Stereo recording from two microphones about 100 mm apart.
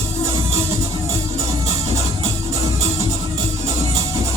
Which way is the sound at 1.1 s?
30° right (ahead or behind).